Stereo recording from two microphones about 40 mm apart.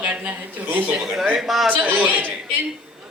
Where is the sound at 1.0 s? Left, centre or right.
Centre.